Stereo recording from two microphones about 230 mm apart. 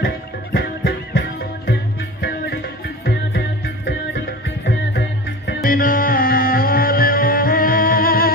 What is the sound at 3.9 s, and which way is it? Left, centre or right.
Music, left.